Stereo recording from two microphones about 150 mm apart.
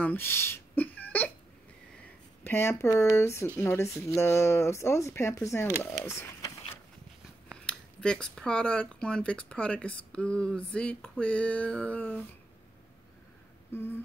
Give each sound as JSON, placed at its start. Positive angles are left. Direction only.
{"t": 0.0, "sound": "a sound", "side_deg": 15}
{"t": 2.4, "sound": "speech", "side_deg": 15}
{"t": 7.5, "sound": "speech", "side_deg": 5}